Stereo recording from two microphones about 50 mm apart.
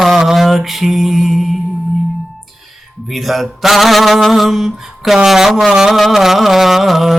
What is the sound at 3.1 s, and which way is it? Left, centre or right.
Mantra, centre.